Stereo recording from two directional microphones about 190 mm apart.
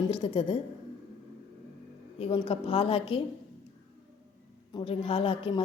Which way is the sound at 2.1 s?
30° left (ahead or behind).